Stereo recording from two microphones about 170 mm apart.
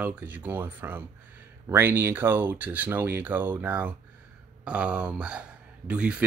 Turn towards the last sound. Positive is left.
turn(degrees=-5)  # may be behind; listen again after turning